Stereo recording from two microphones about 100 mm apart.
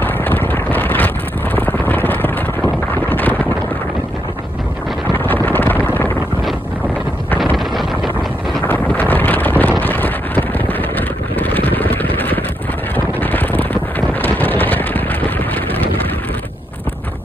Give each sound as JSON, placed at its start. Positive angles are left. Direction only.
{"t": 0.0, "sound": "vehicle", "side_deg": 20}
{"t": 2.9, "sound": "a sound", "side_deg": 20}
{"t": 5.1, "sound": "wind noise", "side_deg": 20}
{"t": 7.5, "sound": "wind noise", "side_deg": 0}
{"t": 8.6, "sound": "wind noise", "side_deg": 20}
{"t": 12.9, "sound": "a sound", "side_deg": 20}